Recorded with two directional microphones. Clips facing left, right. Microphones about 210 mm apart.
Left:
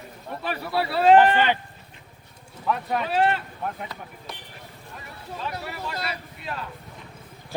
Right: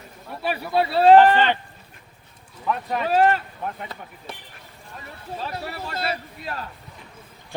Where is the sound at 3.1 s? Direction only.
45° right (ahead or behind).